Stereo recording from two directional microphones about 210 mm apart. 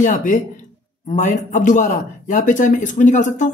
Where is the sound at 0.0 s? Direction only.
35° left (ahead or behind).